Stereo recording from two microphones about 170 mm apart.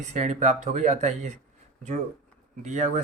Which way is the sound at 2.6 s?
45° right (ahead or behind).